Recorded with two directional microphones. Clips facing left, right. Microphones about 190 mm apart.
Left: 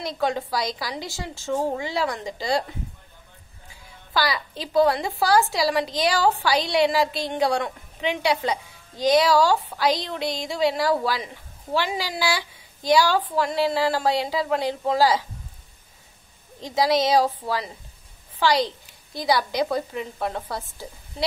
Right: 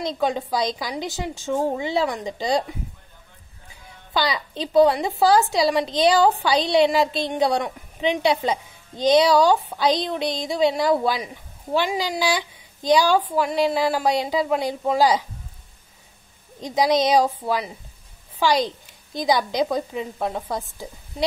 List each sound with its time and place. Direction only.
0.0 s a woman's voice: 15° right (ahead or behind)
4.1 s a woman's voice: 20° right (ahead or behind)
16.6 s a woman's voice: 15° right (ahead or behind)